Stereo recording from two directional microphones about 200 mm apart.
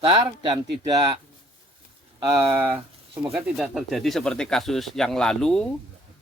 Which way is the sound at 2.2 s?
10° right (ahead or behind).